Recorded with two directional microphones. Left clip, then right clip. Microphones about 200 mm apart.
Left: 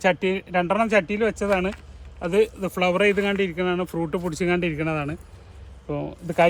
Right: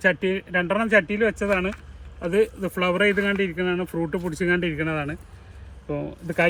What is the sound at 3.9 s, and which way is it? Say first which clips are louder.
Speech: even; 25° left (ahead or behind).